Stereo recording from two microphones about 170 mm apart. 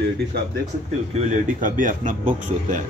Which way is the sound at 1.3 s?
50° right (ahead or behind).